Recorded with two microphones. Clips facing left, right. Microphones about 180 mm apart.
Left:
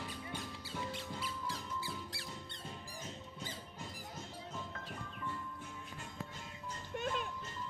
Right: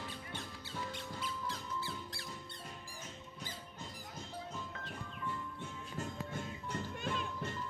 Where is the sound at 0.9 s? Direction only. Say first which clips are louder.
Even; 10° left (ahead or behind).